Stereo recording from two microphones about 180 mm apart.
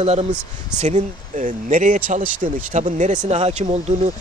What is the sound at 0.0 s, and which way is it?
Speech, 35° right (ahead or behind).